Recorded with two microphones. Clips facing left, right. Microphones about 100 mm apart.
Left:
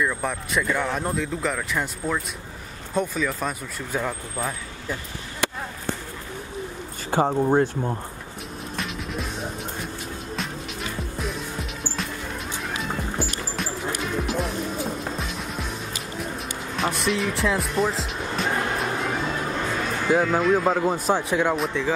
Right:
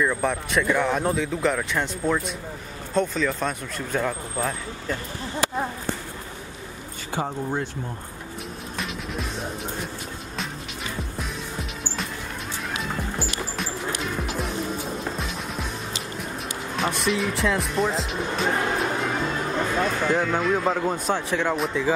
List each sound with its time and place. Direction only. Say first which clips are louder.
0.0 s speech: right 2 dB; centre (ahead or behind)
7.1 s speech: left 7 dB; 45° left (ahead or behind)
8.7 s music: left 1 dB; centre (ahead or behind)
11.0 s music: left 2 dB; centre (ahead or behind)
16.7 s music: even; centre (ahead or behind)
20.1 s speech: left 7 dB; centre (ahead or behind)